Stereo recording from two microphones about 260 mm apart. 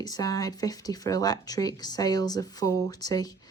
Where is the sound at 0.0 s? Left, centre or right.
Centre.